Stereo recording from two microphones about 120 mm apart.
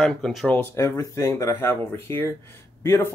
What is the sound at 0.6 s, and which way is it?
Speech, 20° left (ahead or behind).